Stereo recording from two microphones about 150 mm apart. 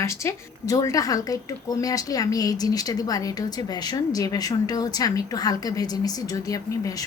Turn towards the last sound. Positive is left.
turn(degrees=25)  # may be behind; listen again after turning